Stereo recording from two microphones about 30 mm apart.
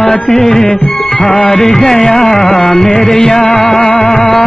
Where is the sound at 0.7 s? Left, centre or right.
Left.